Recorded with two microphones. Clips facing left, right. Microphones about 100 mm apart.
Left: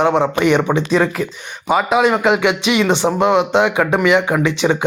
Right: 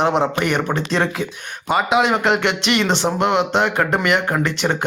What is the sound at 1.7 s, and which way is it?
Speech, centre (ahead or behind).